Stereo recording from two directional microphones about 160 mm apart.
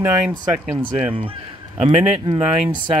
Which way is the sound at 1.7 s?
35° right (ahead or behind).